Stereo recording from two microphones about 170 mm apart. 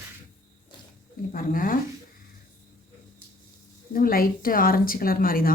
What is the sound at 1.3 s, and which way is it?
Speech, 55° left (ahead or behind).